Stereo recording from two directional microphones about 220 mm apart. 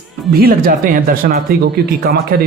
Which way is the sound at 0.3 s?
45° right (ahead or behind).